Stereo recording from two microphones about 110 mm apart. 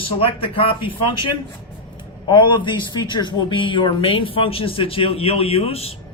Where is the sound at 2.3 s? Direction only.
45° left (ahead or behind).